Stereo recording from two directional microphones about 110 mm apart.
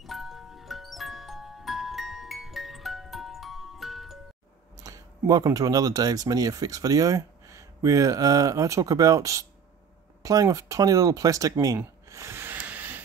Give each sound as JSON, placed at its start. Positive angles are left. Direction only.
{"t": 0.0, "sound": "music", "side_deg": 0}
{"t": 4.7, "sound": "speech", "side_deg": -30}
{"t": 11.8, "sound": "a sound", "side_deg": -25}